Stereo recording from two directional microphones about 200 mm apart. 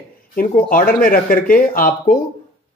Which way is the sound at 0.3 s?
45° left (ahead or behind).